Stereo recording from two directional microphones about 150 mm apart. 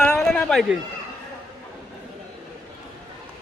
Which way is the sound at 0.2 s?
5° left (ahead or behind).